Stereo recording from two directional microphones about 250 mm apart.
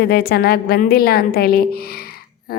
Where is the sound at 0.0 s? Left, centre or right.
Left.